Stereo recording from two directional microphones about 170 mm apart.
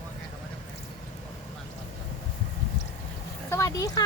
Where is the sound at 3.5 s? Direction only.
15° left (ahead or behind).